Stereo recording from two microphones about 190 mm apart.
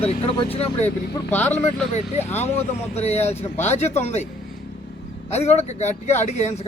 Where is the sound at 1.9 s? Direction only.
35° left (ahead or behind).